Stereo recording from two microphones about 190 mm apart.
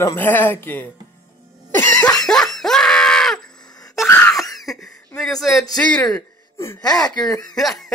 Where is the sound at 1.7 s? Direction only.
15° left (ahead or behind).